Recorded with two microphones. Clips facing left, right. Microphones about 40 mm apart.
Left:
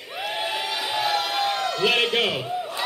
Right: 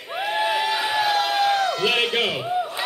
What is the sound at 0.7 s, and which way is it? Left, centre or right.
Music, right.